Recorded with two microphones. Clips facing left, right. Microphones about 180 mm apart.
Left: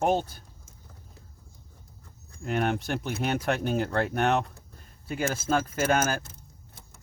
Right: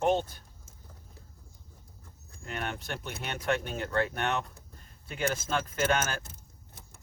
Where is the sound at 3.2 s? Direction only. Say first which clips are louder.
Left 3 dB; 35° left (ahead or behind).